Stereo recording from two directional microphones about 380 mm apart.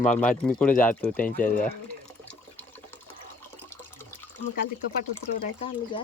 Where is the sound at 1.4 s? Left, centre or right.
Left.